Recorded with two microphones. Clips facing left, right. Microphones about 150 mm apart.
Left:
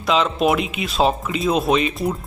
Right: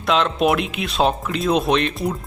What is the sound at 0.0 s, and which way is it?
Speech, centre (ahead or behind).